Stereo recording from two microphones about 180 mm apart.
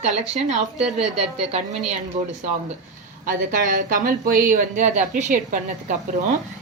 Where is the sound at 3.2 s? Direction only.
50° right (ahead or behind).